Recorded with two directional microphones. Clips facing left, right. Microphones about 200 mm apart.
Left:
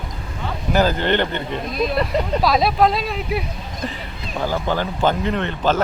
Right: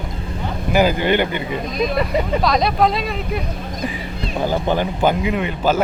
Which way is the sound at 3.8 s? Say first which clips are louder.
Right 3 dB; 10° right (ahead or behind).